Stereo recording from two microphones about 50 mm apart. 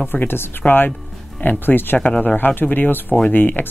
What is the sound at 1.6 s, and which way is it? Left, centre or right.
Speech, left.